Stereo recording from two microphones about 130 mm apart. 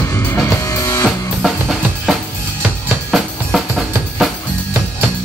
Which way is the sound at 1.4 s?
Centre (ahead or behind).